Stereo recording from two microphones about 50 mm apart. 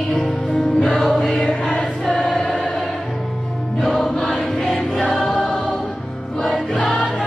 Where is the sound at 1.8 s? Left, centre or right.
Left.